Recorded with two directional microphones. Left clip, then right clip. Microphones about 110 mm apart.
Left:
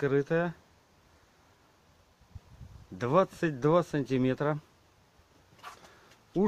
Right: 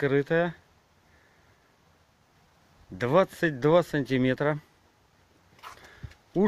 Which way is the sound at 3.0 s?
5° right (ahead or behind).